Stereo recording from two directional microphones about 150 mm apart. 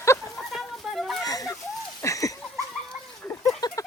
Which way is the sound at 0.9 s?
Centre (ahead or behind).